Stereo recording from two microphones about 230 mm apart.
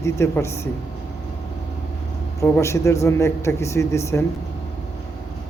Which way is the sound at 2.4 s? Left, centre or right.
Centre.